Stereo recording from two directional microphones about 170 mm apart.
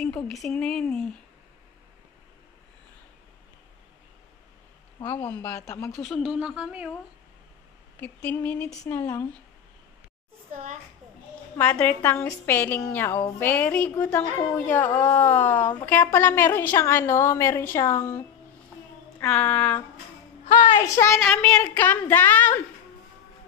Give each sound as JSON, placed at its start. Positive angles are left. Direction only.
{"t": 0.0, "sound": "speech", "side_deg": 5}
{"t": 5.4, "sound": "a woman's voice", "side_deg": 15}
{"t": 5.9, "sound": "speech", "side_deg": 0}
{"t": 8.3, "sound": "a woman's voice", "side_deg": 10}
{"t": 10.5, "sound": "a child's voice", "side_deg": -40}
{"t": 11.5, "sound": "a woman's voice", "side_deg": 10}
{"t": 19.2, "sound": "a woman's voice", "side_deg": 5}
{"t": 20.4, "sound": "a woman's voice", "side_deg": 45}
{"t": 20.8, "sound": "a woman's voice", "side_deg": 15}
{"t": 21.2, "sound": "a woman's voice", "side_deg": 5}